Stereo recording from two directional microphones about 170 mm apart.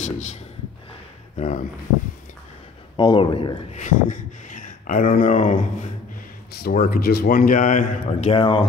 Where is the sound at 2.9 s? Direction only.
25° left (ahead or behind).